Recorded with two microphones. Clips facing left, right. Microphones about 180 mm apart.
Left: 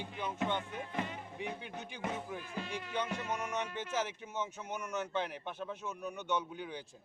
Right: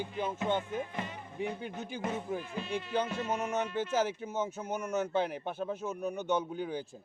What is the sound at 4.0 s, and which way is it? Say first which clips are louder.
Speech: right 5 dB; 40° right (ahead or behind).